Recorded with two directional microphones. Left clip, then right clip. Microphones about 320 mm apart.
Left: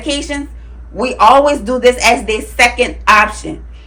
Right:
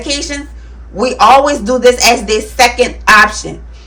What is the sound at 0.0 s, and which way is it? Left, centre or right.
Speech, centre.